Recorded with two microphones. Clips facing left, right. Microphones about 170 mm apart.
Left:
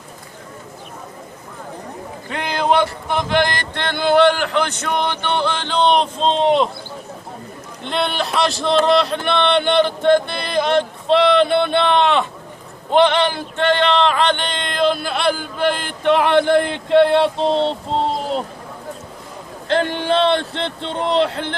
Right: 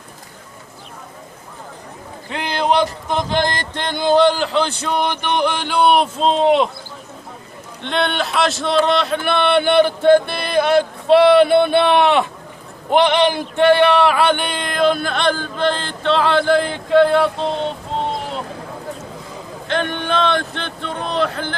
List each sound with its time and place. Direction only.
2.3 s speech: 15° right (ahead or behind)
7.9 s speech: centre (ahead or behind); by 18.4 s 35° left (ahead or behind)
19.6 s speech: 30° left (ahead or behind)